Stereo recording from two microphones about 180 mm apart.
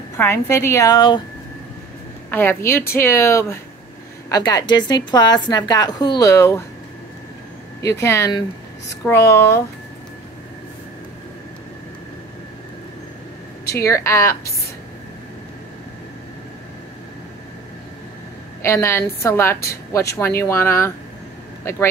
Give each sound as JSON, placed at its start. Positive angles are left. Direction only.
{"t": 0.2, "sound": "a woman's voice", "side_deg": 15}
{"t": 2.3, "sound": "a woman's voice", "side_deg": 15}
{"t": 7.8, "sound": "a woman's voice", "side_deg": 15}
{"t": 13.7, "sound": "a woman's voice", "side_deg": 15}
{"t": 18.6, "sound": "a woman's voice", "side_deg": 15}